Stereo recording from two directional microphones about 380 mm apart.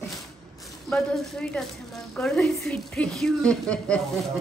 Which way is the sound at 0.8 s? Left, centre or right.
Centre.